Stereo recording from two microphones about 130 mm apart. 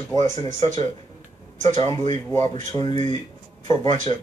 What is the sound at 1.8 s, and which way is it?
Speech, 55° right (ahead or behind).